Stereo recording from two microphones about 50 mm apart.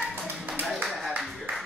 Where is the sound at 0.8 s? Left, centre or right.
Centre.